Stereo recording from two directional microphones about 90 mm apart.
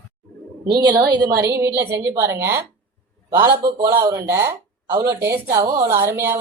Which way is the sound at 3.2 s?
50° right (ahead or behind).